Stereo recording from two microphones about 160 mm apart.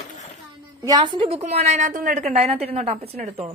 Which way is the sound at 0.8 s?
25° right (ahead or behind).